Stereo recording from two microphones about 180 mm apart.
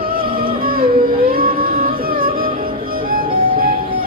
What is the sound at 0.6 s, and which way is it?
Music, 55° right (ahead or behind).